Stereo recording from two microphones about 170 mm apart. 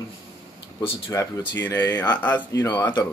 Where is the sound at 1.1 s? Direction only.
20° left (ahead or behind).